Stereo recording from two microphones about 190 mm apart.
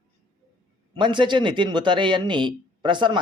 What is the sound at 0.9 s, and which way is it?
Speech, 25° right (ahead or behind).